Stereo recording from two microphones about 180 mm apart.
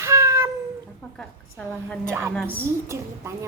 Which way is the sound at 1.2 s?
5° left (ahead or behind).